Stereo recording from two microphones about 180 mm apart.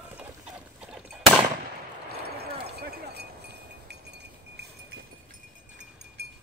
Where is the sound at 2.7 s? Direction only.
65° right (ahead or behind).